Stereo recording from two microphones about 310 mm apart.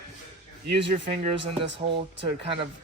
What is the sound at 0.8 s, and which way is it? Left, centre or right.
Speech, right.